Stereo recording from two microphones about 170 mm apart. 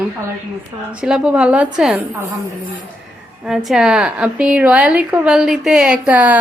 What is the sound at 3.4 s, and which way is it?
Speech, centre (ahead or behind).